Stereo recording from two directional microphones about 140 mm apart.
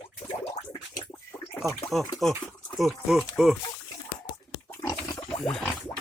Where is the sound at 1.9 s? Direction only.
Centre (ahead or behind).